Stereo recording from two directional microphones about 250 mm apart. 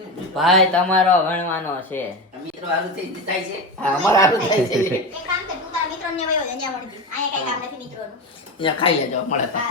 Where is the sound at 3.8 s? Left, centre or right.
Centre.